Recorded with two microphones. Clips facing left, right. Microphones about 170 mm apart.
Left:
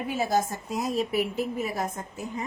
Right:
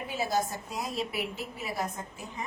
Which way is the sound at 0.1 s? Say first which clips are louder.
Left 4 dB; 50° left (ahead or behind).